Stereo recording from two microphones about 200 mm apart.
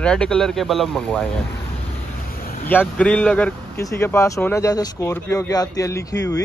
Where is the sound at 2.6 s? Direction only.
10° left (ahead or behind).